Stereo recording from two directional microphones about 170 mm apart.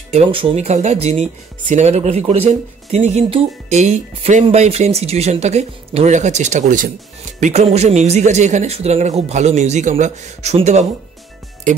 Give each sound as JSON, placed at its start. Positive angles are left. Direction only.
{"t": 0.1, "sound": "speech", "side_deg": -30}